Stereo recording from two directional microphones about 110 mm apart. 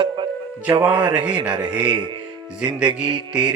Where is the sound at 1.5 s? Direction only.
45° right (ahead or behind).